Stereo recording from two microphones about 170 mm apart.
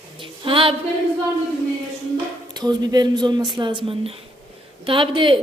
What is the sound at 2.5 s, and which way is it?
Speech, 25° right (ahead or behind).